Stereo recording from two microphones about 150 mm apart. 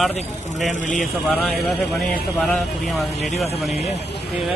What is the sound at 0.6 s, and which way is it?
Speech, 55° left (ahead or behind).